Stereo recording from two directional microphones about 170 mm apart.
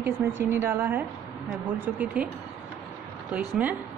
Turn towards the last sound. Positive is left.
turn(degrees=-10)  # may be behind; listen again after turning